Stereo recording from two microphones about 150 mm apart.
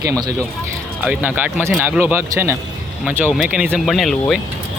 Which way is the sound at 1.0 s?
10° right (ahead or behind).